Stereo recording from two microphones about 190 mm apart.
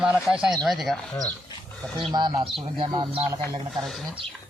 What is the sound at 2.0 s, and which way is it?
Speech, 25° right (ahead or behind).